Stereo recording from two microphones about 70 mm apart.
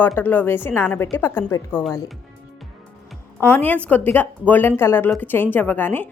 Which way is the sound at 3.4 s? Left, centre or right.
Left.